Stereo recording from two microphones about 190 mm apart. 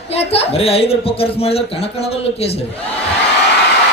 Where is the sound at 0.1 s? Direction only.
30° left (ahead or behind).